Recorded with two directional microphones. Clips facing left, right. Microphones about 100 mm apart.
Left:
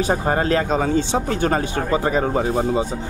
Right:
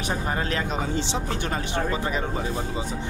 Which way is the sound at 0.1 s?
45° left (ahead or behind).